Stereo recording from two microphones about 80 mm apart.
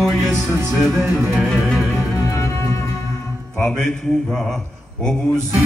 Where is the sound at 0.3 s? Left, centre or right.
Right.